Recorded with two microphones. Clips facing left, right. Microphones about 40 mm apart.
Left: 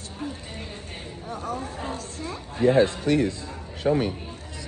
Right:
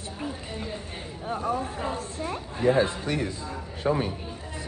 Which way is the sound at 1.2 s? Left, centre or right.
Right.